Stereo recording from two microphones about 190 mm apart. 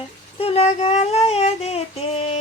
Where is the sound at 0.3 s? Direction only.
30° left (ahead or behind).